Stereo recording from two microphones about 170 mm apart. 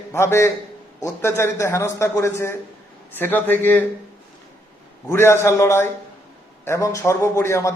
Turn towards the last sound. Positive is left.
turn(degrees=15)  # may be behind; listen again after turning